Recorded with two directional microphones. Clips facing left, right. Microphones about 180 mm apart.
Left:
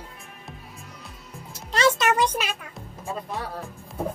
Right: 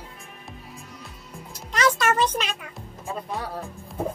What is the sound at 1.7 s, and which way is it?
Music, 30° left (ahead or behind).